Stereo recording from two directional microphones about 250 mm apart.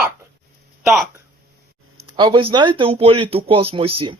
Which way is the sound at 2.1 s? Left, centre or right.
Centre.